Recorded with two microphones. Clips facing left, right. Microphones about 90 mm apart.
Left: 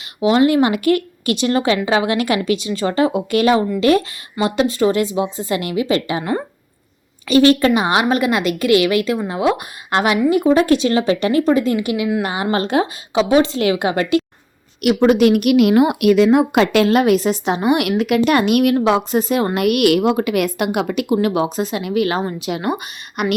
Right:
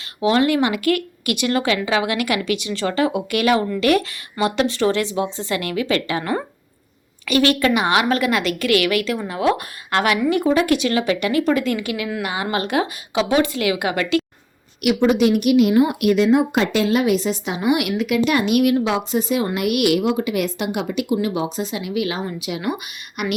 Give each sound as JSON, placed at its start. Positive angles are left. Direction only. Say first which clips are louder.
{"t": 0.2, "sound": "speech", "louder": "left 3 dB", "side_deg": 20}
{"t": 10.5, "sound": "speech", "louder": "left 4 dB", "side_deg": 30}
{"t": 14.8, "sound": "a woman's voice", "louder": "left 3 dB", "side_deg": 45}